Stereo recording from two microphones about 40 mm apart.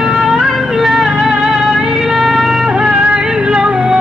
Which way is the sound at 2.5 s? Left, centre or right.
Centre.